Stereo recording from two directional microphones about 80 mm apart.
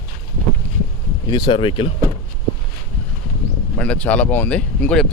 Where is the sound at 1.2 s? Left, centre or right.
Left.